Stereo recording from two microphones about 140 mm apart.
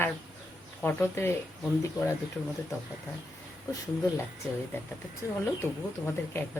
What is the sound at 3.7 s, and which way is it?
Speech, 25° left (ahead or behind).